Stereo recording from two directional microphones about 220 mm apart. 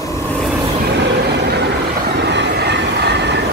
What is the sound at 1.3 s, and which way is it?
Vehicle, 50° right (ahead or behind).